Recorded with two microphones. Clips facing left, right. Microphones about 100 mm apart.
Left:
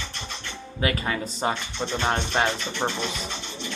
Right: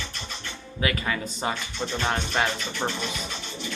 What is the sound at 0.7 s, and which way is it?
Speech, 35° left (ahead or behind).